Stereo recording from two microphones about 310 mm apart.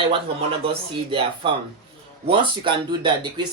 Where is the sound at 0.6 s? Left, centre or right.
Centre.